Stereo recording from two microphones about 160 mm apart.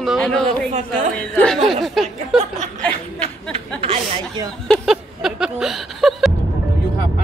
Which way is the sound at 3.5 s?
40° right (ahead or behind).